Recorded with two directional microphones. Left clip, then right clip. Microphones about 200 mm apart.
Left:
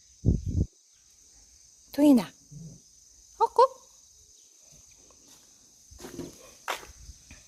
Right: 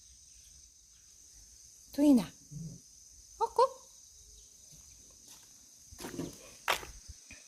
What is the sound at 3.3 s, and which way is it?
Cricket, 50° left (ahead or behind).